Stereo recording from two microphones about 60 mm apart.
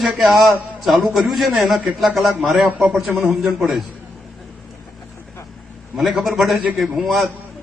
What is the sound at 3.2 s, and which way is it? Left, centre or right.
Speech, centre.